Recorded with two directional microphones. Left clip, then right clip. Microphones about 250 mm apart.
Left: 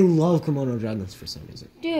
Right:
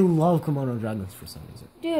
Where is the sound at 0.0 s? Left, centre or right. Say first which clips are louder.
Left 2 dB; right.